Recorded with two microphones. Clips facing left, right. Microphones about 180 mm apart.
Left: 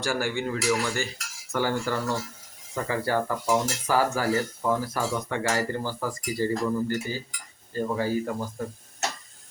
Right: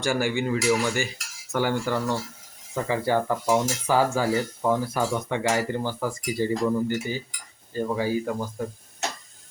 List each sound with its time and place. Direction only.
0.0 s speech: 5° right (ahead or behind)
2.7 s cutlery: 15° right (ahead or behind)
7.7 s speech: 10° right (ahead or behind)